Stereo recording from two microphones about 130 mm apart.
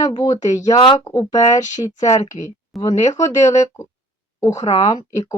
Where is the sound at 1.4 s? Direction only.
70° left (ahead or behind).